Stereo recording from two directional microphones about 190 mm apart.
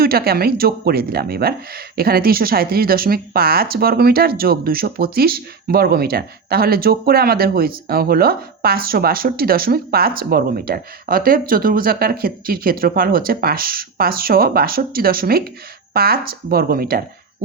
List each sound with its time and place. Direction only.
0.0 s speech: 55° right (ahead or behind)